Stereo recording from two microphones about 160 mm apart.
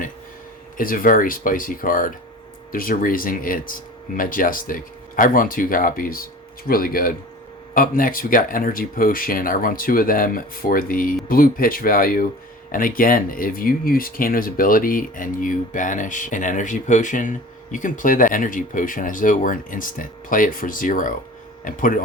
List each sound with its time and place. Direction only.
0.8 s speech: 60° left (ahead or behind)